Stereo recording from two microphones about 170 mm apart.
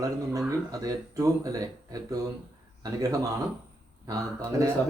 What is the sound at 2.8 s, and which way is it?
Speech, 20° right (ahead or behind).